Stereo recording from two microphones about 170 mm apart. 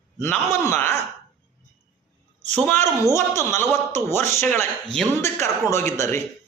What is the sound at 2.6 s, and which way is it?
A man's voice, 15° left (ahead or behind).